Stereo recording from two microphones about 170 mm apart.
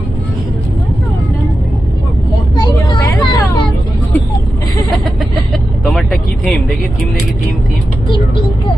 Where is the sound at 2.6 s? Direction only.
25° left (ahead or behind).